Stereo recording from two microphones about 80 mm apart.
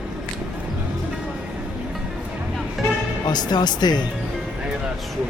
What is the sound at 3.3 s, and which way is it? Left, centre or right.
Speech, left.